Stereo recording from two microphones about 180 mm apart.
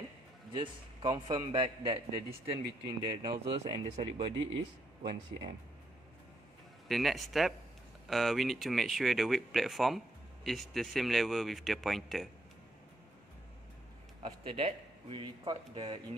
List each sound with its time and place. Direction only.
0.5 s a man's voice: 25° right (ahead or behind)
6.9 s speech: centre (ahead or behind)
14.2 s a man's voice: 30° right (ahead or behind)